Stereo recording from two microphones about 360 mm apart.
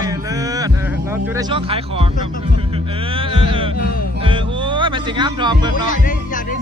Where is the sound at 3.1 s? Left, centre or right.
Centre.